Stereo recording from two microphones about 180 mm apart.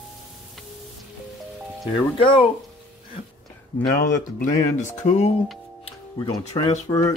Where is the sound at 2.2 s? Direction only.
30° left (ahead or behind).